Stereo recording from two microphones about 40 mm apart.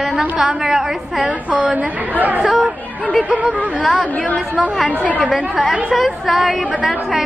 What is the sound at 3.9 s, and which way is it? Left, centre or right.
Speech, left.